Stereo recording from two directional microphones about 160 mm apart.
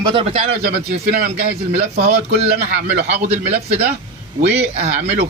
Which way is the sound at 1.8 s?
40° right (ahead or behind).